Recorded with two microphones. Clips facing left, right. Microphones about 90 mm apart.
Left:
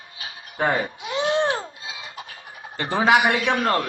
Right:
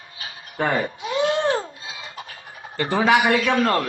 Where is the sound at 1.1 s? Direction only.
25° left (ahead or behind).